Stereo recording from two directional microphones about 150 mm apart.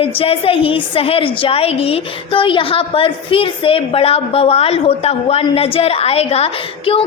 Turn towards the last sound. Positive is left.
turn(degrees=40)  # may be behind; listen again after turning